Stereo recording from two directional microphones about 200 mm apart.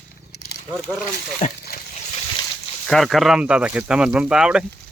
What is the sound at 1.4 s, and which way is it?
Speech, 35° left (ahead or behind).